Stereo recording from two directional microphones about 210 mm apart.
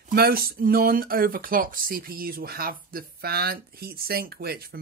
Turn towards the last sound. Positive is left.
turn(degrees=-45)  # may be behind; listen again after turning